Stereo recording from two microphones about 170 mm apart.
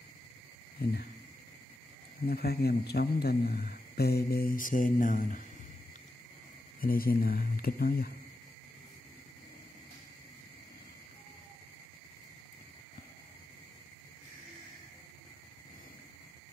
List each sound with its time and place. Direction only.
0.8 s speech: 65° left (ahead or behind)
2.2 s a man's voice: 65° left (ahead or behind); by 5.4 s 50° left (ahead or behind)
6.8 s a man's voice: 60° left (ahead or behind)